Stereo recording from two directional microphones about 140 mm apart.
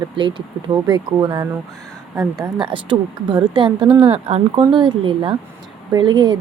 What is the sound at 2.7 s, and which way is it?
Speech, 35° right (ahead or behind).